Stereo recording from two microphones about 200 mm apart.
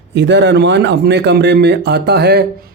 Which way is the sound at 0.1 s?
60° right (ahead or behind).